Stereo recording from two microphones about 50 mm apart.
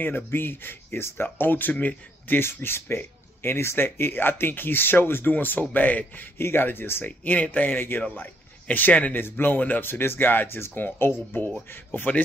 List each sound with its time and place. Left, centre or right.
0.0 s speech: left
6.3 s speech: left
7.1 s a man's voice: left
9.1 s speech: left